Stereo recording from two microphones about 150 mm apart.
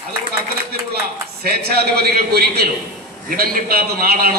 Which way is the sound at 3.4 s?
75° right (ahead or behind).